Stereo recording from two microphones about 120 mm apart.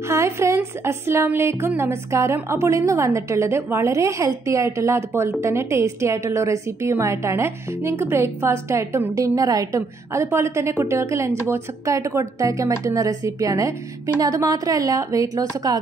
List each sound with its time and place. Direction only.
0.1 s a woman's voice: 25° right (ahead or behind)